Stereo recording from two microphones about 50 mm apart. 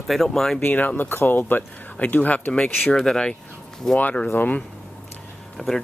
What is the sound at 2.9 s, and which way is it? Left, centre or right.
Speech, centre.